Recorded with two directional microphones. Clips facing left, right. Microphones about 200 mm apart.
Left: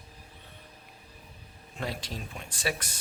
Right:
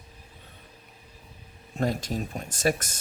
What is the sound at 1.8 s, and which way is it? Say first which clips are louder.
Speech: right 8 dB; 45° right (ahead or behind).